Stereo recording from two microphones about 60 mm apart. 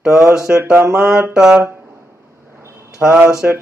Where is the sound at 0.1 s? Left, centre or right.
Right.